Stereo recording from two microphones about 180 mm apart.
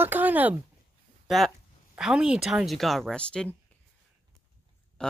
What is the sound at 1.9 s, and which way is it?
Speech, 5° right (ahead or behind).